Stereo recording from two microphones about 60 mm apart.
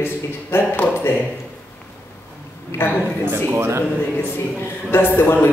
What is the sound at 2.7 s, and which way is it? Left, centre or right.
Speech, left.